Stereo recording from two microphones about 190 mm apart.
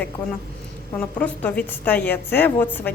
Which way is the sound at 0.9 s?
5° left (ahead or behind).